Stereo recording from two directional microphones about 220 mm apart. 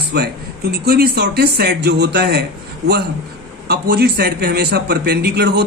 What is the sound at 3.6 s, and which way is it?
A man's voice, 45° right (ahead or behind).